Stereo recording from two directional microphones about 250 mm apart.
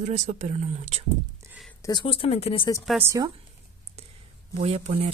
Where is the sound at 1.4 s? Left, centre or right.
Centre.